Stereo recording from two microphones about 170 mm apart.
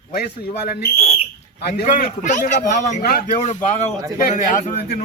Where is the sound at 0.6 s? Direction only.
70° left (ahead or behind).